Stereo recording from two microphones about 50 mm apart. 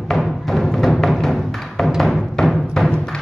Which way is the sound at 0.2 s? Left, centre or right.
Centre.